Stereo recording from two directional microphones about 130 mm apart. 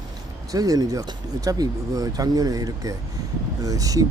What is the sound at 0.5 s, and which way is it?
Speech, 30° right (ahead or behind).